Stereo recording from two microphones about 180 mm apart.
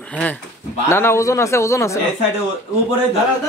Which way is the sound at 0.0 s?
5° left (ahead or behind).